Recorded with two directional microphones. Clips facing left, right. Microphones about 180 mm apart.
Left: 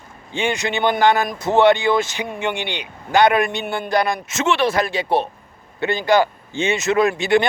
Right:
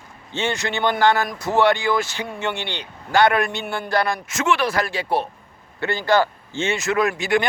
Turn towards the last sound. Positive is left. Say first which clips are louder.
# left 4 dB
turn(degrees=25)  # may be behind; listen again after turning